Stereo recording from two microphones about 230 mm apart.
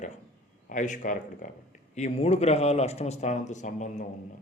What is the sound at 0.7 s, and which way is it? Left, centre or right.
Speech, left.